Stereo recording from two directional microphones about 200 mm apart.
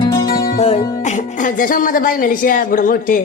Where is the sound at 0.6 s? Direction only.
30° left (ahead or behind).